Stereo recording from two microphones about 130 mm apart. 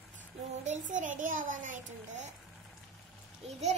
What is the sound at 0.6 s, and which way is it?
Child singing, 70° right (ahead or behind).